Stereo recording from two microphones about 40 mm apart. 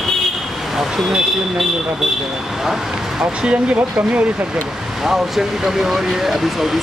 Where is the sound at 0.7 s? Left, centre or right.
Centre.